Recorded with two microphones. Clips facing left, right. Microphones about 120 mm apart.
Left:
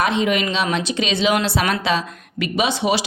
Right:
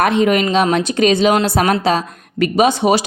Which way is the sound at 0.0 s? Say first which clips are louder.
Right 5 dB; 50° right (ahead or behind).